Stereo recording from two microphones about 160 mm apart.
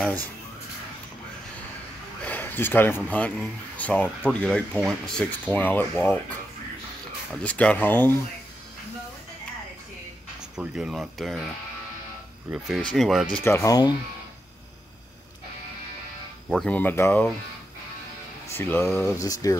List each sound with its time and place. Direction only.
2.2 s speech: 10° left (ahead or behind)
7.4 s speech: 10° left (ahead or behind)
10.5 s speech: 5° right (ahead or behind)
12.5 s speech: centre (ahead or behind)
13.4 s speech: 15° left (ahead or behind)
16.4 s speech: 5° left (ahead or behind)
18.5 s speech: 15° left (ahead or behind)